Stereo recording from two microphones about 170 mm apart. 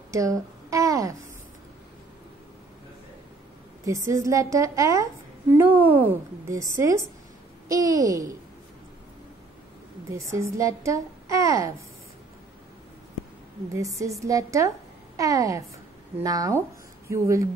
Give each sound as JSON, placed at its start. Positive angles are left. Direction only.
{"t": 0.1, "sound": "a woman's voice", "side_deg": -20}
{"t": 3.8, "sound": "a woman's voice", "side_deg": -20}
{"t": 10.0, "sound": "a woman's voice", "side_deg": -15}
{"t": 13.7, "sound": "a woman's voice", "side_deg": -20}